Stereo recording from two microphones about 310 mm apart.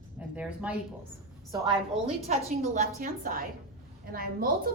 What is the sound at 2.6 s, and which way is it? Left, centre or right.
A woman's voice, right.